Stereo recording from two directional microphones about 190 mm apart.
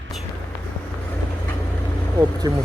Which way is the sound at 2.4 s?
20° right (ahead or behind).